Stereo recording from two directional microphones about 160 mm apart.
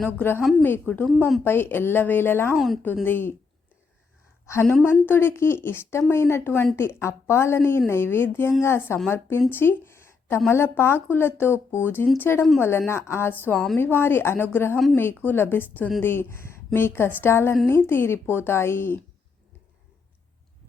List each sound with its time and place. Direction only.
0.0 s speech: 10° left (ahead or behind)
4.4 s speech: 15° left (ahead or behind)